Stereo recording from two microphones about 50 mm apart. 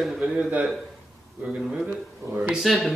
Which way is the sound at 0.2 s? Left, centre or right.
Right.